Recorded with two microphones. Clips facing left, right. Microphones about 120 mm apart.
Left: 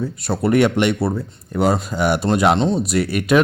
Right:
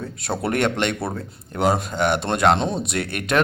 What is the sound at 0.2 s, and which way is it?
Speech, centre (ahead or behind).